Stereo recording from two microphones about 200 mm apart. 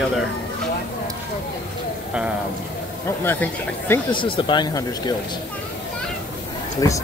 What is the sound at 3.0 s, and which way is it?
Speech, 10° left (ahead or behind).